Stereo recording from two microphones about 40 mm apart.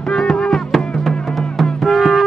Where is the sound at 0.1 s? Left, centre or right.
Centre.